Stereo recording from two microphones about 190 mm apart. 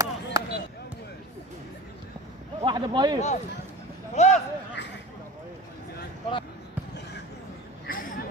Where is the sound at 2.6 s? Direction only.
25° right (ahead or behind).